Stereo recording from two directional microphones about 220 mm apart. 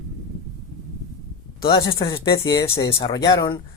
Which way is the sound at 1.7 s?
25° left (ahead or behind).